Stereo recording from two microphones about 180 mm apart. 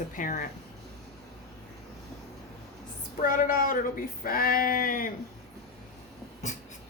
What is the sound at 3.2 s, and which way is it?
Speech, 50° left (ahead or behind).